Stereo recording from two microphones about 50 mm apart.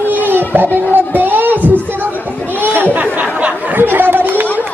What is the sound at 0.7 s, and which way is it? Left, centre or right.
Music, right.